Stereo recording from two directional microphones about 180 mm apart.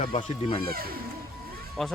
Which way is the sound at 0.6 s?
55° right (ahead or behind).